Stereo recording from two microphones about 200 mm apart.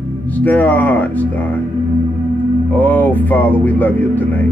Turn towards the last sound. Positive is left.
turn(degrees=10)  # may be behind; listen again after turning